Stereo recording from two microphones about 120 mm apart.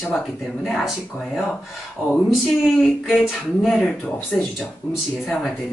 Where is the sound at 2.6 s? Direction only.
Centre (ahead or behind).